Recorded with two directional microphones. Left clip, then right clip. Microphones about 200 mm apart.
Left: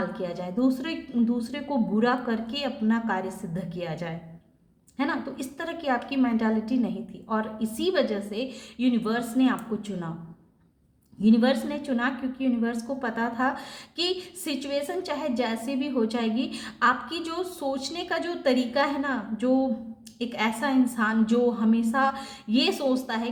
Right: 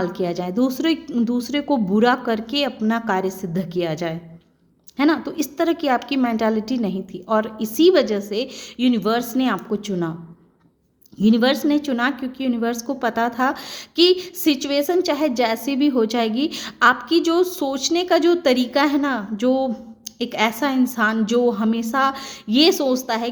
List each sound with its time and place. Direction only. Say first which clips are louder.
0.0 s a woman's voice: right 8 dB; 45° right (ahead or behind)
11.2 s a woman's voice: right 5 dB; 45° right (ahead or behind)